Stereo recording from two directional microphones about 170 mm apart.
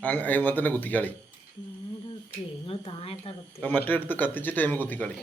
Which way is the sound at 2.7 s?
35° left (ahead or behind).